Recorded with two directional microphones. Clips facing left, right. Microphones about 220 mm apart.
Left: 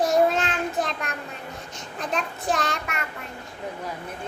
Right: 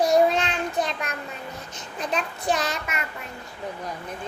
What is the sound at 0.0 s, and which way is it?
Child singing, centre (ahead or behind).